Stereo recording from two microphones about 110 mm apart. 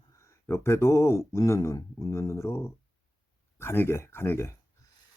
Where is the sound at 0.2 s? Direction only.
25° left (ahead or behind).